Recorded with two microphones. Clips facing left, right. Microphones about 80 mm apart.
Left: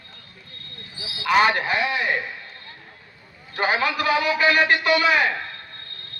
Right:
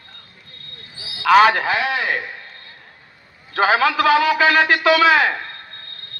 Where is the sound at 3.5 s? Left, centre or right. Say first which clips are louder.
Right 6 dB; right.